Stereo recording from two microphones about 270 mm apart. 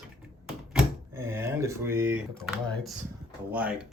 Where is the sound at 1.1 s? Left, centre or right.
Centre.